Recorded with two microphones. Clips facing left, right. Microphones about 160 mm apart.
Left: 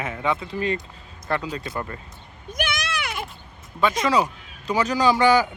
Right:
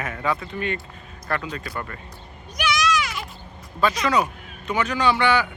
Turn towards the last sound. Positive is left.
turn(degrees=40)  # may be behind; listen again after turning